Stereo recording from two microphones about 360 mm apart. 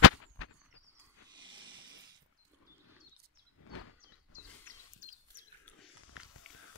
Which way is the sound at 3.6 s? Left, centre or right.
Left.